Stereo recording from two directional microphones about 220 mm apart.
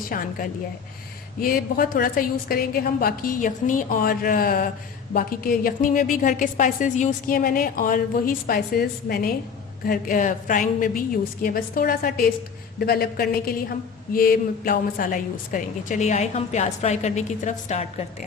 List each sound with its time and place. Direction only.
0.1 s a woman's voice: 40° left (ahead or behind)
1.4 s a woman's voice: 40° left (ahead or behind)